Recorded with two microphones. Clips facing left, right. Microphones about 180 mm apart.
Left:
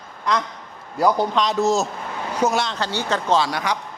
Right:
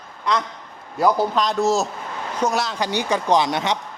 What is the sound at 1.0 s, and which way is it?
A man's voice, centre (ahead or behind).